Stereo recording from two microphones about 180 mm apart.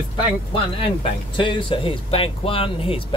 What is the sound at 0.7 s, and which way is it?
Speech, 30° left (ahead or behind).